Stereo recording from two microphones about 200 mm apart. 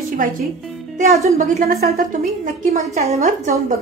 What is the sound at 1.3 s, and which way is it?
Speech, 40° right (ahead or behind).